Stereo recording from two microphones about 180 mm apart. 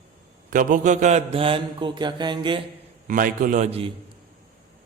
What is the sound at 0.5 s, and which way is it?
Mantra, 45° right (ahead or behind).